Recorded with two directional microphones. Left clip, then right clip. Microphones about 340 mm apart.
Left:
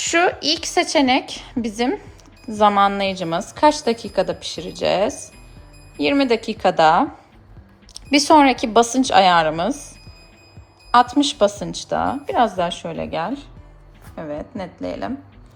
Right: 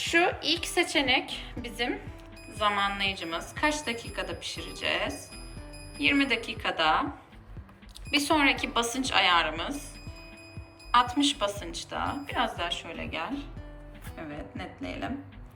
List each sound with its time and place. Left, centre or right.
0.0 s a woman's voice: left
3.1 s a woman's voice: centre
7.9 s a sound: left
8.3 s a woman's voice: centre
10.9 s a woman's voice: centre